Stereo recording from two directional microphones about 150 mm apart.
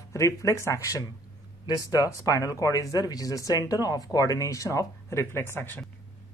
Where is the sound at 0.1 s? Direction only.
20° left (ahead or behind).